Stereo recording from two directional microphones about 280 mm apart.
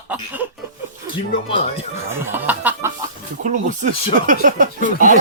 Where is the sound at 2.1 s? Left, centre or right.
Centre.